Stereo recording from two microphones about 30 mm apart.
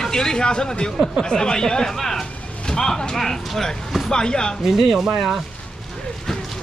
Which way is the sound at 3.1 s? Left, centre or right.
Centre.